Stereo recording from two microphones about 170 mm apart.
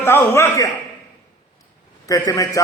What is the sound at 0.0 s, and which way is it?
Speech, 15° left (ahead or behind).